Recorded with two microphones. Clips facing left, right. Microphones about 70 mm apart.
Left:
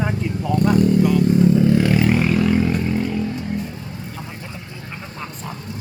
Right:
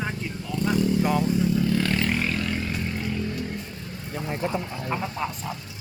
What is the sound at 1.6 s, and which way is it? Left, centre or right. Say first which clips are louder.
Vehicle: left 8 dB; left.